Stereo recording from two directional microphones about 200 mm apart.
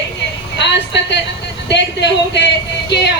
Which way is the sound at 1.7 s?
60° left (ahead or behind).